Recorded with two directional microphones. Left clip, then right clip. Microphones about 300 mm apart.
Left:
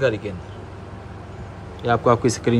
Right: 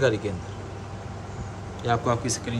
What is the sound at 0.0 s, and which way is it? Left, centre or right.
Speech, centre.